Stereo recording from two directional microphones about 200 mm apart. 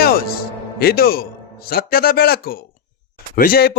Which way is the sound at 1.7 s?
50° left (ahead or behind).